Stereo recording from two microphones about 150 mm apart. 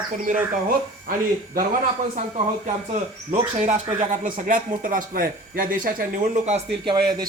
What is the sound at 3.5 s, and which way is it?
Speech, 45° right (ahead or behind).